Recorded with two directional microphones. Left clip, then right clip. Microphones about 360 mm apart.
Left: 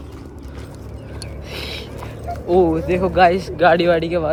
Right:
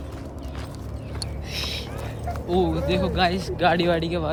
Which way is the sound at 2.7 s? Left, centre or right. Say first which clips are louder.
Left 8 dB; centre.